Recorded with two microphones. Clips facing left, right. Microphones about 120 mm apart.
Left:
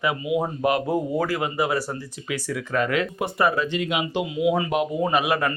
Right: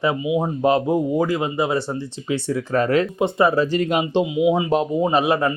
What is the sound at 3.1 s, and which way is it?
Speech, 25° right (ahead or behind).